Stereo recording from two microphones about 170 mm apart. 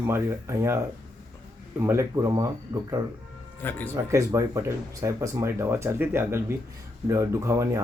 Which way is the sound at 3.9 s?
15° right (ahead or behind).